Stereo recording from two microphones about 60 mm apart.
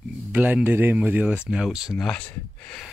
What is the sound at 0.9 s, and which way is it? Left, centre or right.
Speech, right.